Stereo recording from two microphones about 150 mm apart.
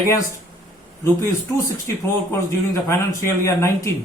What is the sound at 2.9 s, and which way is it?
Speech, 15° left (ahead or behind).